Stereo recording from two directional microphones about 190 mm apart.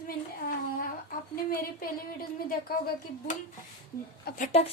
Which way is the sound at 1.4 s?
50° left (ahead or behind).